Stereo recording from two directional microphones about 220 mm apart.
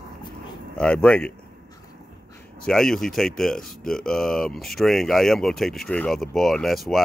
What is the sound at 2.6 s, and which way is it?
Speech, centre (ahead or behind).